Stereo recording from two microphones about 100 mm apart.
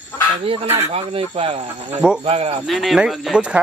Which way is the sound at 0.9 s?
70° right (ahead or behind).